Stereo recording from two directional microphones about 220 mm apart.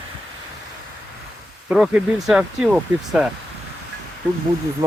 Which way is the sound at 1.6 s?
5° right (ahead or behind).